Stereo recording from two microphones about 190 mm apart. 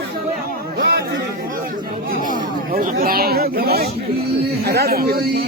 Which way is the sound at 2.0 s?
45° right (ahead or behind).